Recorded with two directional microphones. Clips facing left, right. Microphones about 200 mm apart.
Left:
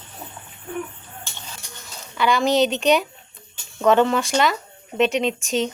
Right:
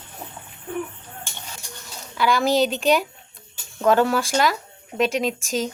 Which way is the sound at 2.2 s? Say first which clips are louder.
Left 1 dB; centre (ahead or behind).